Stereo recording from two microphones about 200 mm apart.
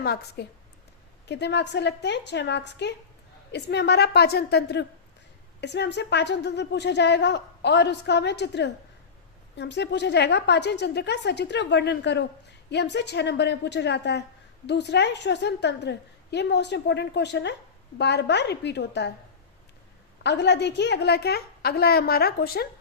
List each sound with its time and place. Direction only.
0.0 s a woman's voice: 55° left (ahead or behind)
20.2 s a woman's voice: 60° left (ahead or behind)